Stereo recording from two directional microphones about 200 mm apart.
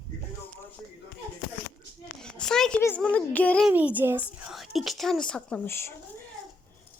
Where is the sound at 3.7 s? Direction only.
5° right (ahead or behind); by 5.9 s 10° left (ahead or behind).